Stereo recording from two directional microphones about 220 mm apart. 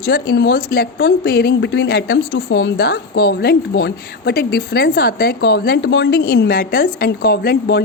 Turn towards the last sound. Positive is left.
turn(degrees=45)  # may be behind; listen again after turning